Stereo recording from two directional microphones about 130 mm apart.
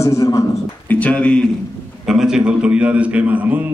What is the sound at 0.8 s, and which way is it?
Speech, 10° left (ahead or behind).